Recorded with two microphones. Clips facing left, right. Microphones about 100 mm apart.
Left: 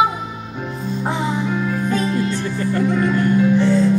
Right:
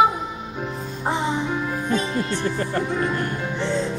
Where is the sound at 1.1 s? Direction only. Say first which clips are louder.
Left 1 dB; 20° right (ahead or behind).